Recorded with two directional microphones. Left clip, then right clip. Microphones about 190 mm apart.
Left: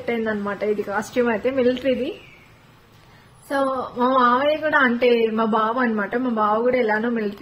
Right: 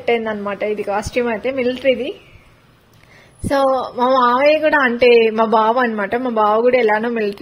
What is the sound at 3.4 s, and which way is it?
A woman's voice, 35° right (ahead or behind).